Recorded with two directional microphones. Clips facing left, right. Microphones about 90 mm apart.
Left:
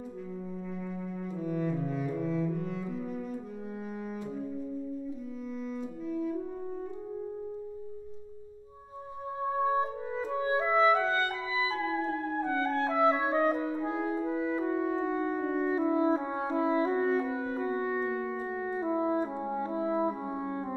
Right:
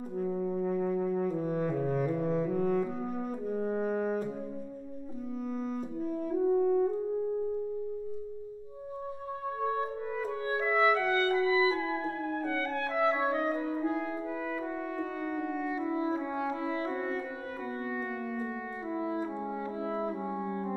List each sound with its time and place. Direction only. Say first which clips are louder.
0.2 s brass instrument: right 12 dB; 45° right (ahead or behind)
5.9 s brass instrument: right 3 dB; 45° right (ahead or behind)
9.6 s clarinet: left 3 dB; 25° left (ahead or behind)
17.7 s music: left 4 dB; 25° left (ahead or behind)